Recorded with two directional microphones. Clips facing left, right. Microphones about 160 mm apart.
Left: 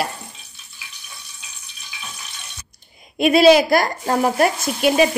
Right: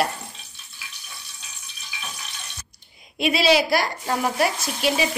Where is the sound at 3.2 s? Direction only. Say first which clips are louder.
Left 7 dB; 50° left (ahead or behind).